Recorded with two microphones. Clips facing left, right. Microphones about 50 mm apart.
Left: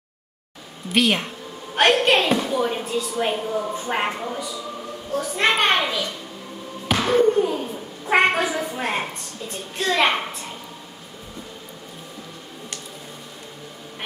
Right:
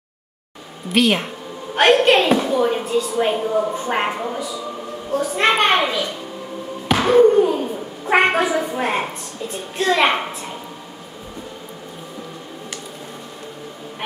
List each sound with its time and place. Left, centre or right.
0.8 s a woman's voice: centre
4.1 s a woman's voice: centre
5.4 s a woman's voice: centre